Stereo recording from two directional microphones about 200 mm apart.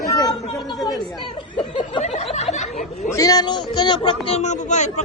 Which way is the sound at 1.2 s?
25° left (ahead or behind).